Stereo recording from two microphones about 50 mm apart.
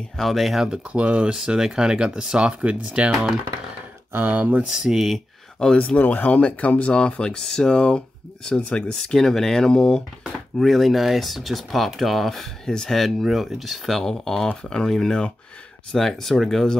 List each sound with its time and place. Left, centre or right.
0.2 s speech: centre
0.8 s speech: right
1.3 s speech: centre
3.1 s speech: centre
4.3 s speech: right
4.6 s speech: centre
5.8 s speech: left
6.4 s speech: left
10.6 s speech: centre
12.6 s speech: centre